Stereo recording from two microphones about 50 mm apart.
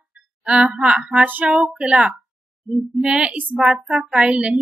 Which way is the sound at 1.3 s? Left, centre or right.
Right.